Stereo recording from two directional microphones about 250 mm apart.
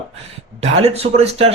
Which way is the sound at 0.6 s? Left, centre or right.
Right.